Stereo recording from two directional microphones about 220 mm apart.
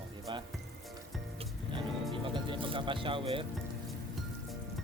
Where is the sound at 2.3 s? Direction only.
20° right (ahead or behind).